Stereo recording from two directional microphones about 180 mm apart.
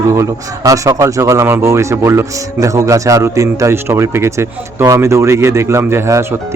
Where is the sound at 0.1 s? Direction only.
15° right (ahead or behind).